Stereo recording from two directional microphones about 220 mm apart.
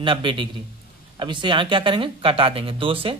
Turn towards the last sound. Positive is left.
turn(degrees=-25)  # may be behind; listen again after turning